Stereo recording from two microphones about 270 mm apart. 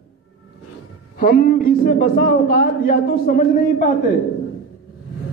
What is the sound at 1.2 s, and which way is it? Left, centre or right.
A man's voice, left.